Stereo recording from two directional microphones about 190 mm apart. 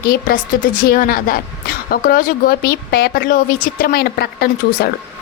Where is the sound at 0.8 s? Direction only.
50° left (ahead or behind).